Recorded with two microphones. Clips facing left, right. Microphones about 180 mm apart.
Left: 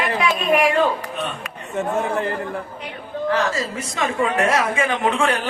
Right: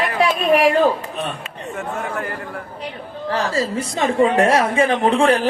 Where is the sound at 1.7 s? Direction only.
25° left (ahead or behind).